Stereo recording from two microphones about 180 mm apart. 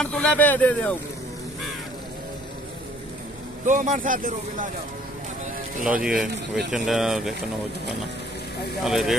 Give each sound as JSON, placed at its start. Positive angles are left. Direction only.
{"t": 0.0, "sound": "speech", "side_deg": 5}
{"t": 3.6, "sound": "speech", "side_deg": -45}
{"t": 6.0, "sound": "speech", "side_deg": -5}
{"t": 8.8, "sound": "speech", "side_deg": 0}